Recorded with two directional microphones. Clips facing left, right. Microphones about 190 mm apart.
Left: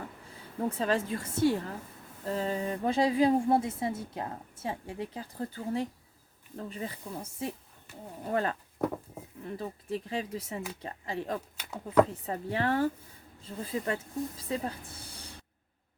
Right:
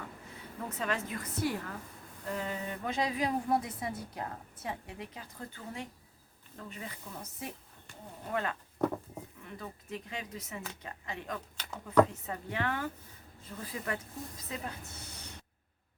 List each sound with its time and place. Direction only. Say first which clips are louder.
0.8 s a woman's voice: left 4 dB; 30° left (ahead or behind)
7.9 s speech: left 5 dB; 5° left (ahead or behind)
8.3 s a woman's voice: left 5 dB; 35° left (ahead or behind)
11.5 s speech: left 1 dB; 10° left (ahead or behind)
12.2 s a woman's voice: left 5 dB; 35° left (ahead or behind)